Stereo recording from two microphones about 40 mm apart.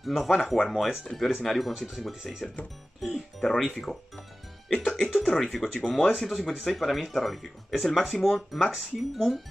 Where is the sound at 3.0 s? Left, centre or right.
Centre.